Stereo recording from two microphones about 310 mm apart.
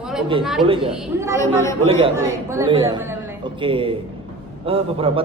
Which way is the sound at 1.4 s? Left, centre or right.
Centre.